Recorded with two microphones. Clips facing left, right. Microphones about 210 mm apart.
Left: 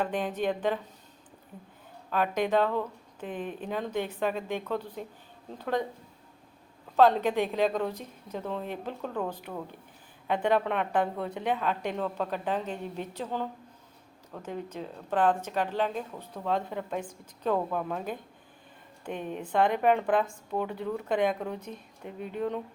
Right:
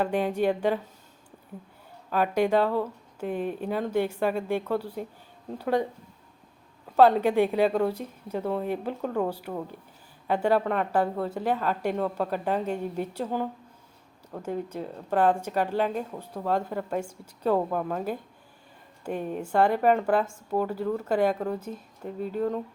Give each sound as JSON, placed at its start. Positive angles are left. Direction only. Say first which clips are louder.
{"t": 0.0, "sound": "speech", "louder": "right 4 dB", "side_deg": -10}
{"t": 2.0, "sound": "speech", "louder": "right 4 dB", "side_deg": -5}
{"t": 6.9, "sound": "speech", "louder": "right 3 dB", "side_deg": -10}
{"t": 22.0, "sound": "speech", "louder": "right 6 dB", "side_deg": -40}
{"t": 22.4, "sound": "speech", "louder": "right 3 dB", "side_deg": 0}